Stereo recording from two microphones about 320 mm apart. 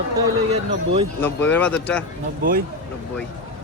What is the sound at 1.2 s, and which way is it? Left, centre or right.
Speech, centre.